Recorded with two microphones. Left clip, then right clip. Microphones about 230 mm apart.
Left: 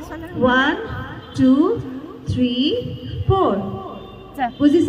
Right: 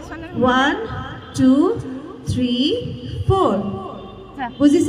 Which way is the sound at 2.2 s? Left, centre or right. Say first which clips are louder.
Even; right.